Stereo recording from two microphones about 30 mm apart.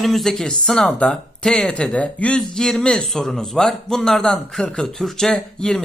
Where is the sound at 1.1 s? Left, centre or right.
Left.